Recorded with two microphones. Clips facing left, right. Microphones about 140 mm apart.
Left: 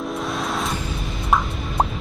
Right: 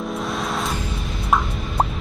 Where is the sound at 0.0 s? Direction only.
Centre (ahead or behind).